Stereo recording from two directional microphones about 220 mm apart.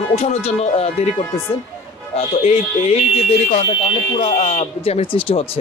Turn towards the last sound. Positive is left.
turn(degrees=25)  # may be behind; listen again after turning